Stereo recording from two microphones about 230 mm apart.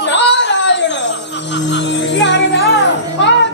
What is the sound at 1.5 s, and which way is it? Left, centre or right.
Music, left.